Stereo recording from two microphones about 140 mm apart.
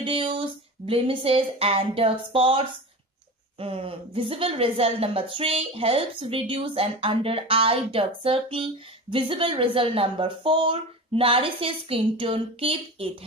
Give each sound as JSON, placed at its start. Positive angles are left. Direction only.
{"t": 0.0, "sound": "a woman's voice", "side_deg": -40}